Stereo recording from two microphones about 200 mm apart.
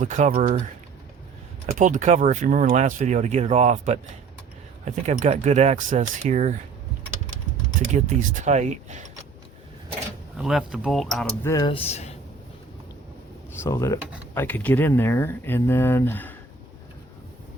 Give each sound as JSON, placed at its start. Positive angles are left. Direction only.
{"t": 0.0, "sound": "speech", "side_deg": -40}
{"t": 1.8, "sound": "speech", "side_deg": -40}
{"t": 7.9, "sound": "speech", "side_deg": -40}
{"t": 10.3, "sound": "speech", "side_deg": 0}
{"t": 11.4, "sound": "speech", "side_deg": 20}
{"t": 13.6, "sound": "speech", "side_deg": 15}